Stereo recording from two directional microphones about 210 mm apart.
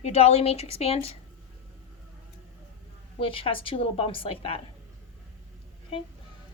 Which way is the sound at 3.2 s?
25° left (ahead or behind).